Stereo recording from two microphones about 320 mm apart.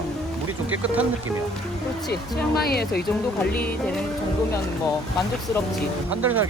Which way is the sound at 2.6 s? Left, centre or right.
Left.